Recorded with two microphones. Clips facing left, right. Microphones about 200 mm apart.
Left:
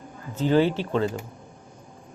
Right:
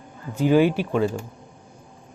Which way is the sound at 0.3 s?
10° right (ahead or behind).